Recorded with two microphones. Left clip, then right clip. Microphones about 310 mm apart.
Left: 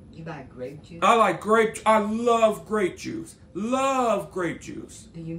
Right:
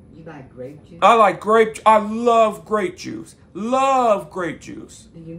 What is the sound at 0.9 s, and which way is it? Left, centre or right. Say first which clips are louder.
Speech: right 6 dB; centre.